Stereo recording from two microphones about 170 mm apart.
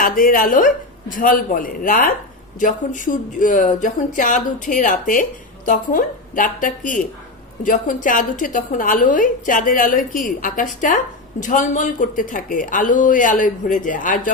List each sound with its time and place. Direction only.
0.0 s a woman's voice: 55° left (ahead or behind)